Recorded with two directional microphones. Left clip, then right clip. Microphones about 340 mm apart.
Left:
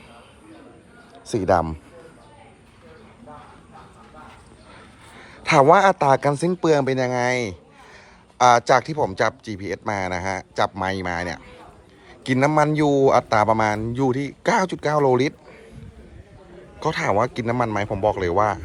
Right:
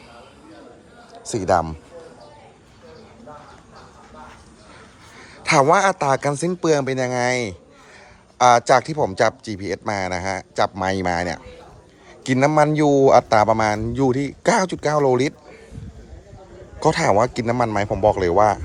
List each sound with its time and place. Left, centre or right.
1.5 s a man's voice: centre
5.1 s a man's voice: centre
16.8 s a man's voice: centre